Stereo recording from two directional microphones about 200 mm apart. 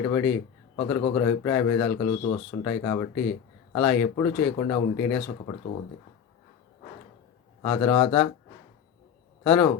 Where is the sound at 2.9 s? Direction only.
20° left (ahead or behind).